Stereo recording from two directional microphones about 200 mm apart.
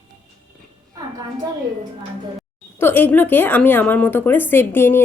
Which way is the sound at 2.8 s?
10° left (ahead or behind).